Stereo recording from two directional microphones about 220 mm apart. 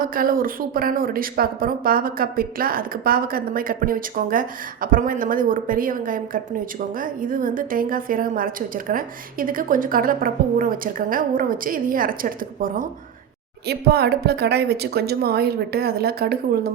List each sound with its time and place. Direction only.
0.0 s a woman's voice: 40° right (ahead or behind)